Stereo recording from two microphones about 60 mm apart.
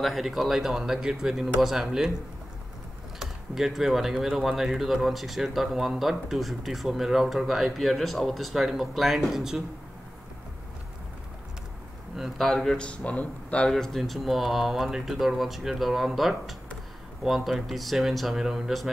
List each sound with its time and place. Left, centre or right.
0.0 s speech: centre
3.2 s speech: centre
12.2 s speech: centre
12.8 s speech: left
13.7 s speech: centre